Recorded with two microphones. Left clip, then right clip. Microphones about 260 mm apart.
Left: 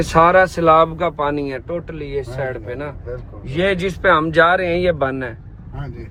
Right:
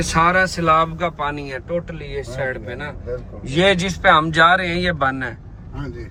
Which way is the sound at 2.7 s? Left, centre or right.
Left.